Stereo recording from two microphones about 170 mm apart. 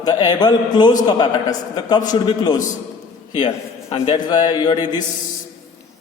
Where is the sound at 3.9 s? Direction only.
30° left (ahead or behind).